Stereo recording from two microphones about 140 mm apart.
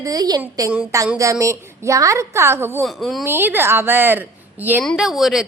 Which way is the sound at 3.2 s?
15° right (ahead or behind).